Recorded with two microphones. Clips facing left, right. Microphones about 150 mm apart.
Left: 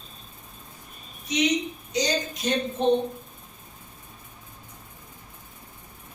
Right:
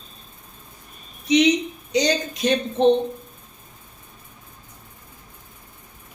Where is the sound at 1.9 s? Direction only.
75° right (ahead or behind).